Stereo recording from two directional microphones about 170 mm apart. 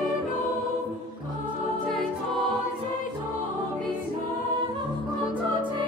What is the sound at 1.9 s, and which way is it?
Music, centre (ahead or behind).